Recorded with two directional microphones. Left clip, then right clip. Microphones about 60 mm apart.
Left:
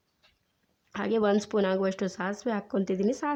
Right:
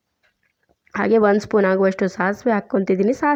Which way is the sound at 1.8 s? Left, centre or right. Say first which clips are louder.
Right 11 dB; right.